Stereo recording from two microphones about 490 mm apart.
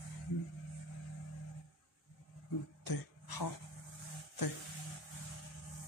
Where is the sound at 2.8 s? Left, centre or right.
Left.